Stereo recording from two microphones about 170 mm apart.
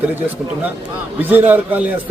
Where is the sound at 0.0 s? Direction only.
10° right (ahead or behind).